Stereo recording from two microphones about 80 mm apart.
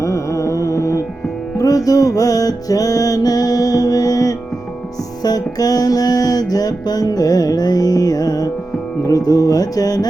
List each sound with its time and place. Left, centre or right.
0.0 s music: left